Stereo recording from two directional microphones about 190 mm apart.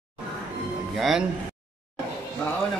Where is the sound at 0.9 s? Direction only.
Centre (ahead or behind).